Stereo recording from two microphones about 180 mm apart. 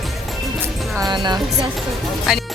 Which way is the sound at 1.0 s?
25° right (ahead or behind).